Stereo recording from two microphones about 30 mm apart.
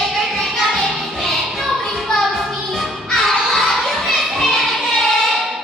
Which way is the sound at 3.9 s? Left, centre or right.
Centre.